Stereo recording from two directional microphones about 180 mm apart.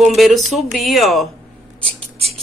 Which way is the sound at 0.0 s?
Centre (ahead or behind).